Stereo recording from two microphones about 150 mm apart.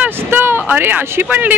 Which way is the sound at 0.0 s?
15° right (ahead or behind).